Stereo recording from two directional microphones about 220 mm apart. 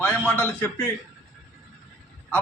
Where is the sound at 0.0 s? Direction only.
5° left (ahead or behind).